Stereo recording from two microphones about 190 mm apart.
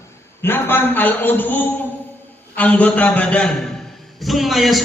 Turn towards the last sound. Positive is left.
turn(degrees=0)  # may be behind; listen again after turning